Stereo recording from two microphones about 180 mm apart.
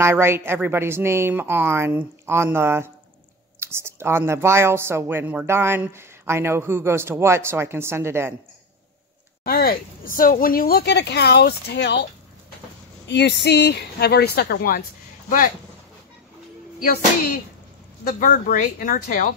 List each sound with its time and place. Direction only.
0.0 s speech: 15° right (ahead or behind)
9.4 s speech: 55° left (ahead or behind)
18.0 s speech: 50° left (ahead or behind)